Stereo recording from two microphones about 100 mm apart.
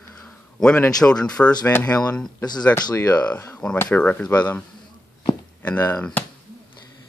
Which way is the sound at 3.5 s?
10° left (ahead or behind).